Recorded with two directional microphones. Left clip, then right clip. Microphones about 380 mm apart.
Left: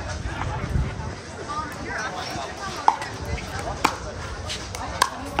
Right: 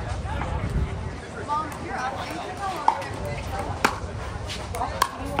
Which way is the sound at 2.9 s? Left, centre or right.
Left.